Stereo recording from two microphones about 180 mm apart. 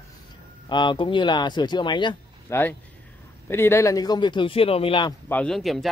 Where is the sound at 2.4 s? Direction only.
10° left (ahead or behind); by 5.1 s 30° left (ahead or behind).